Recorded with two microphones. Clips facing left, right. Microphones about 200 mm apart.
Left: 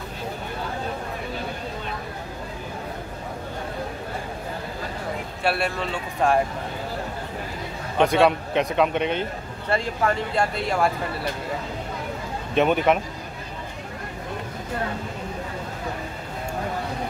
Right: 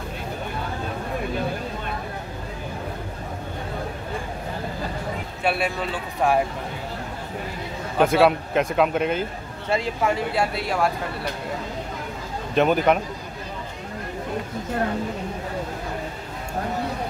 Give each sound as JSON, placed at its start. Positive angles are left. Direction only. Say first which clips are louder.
{"t": 5.4, "sound": "speech", "louder": "right 1 dB", "side_deg": 0}
{"t": 8.0, "sound": "speech", "louder": "right 1 dB", "side_deg": -5}
{"t": 12.5, "sound": "speech", "louder": "right 1 dB", "side_deg": 0}